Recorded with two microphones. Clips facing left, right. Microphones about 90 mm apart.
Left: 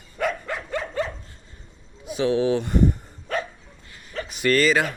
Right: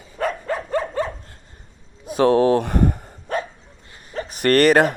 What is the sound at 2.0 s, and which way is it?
Speech, 50° right (ahead or behind).